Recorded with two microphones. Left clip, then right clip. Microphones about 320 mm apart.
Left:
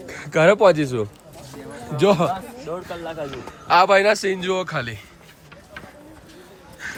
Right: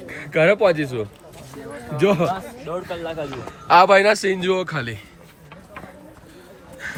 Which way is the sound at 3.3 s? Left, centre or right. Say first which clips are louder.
Right 3 dB; centre.